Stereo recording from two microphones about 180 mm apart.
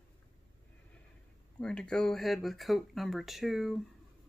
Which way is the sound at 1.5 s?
5° left (ahead or behind).